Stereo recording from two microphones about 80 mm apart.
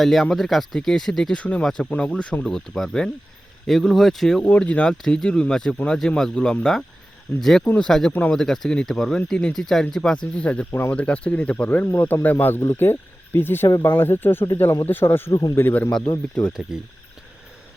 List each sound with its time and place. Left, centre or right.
0.0 s speech: centre
10.7 s speech: left
10.9 s speech: centre
15.3 s speech: left
15.5 s speech: left
16.4 s speech: centre